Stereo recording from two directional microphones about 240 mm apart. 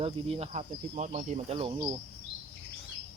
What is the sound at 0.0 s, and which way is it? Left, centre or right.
Speech, right.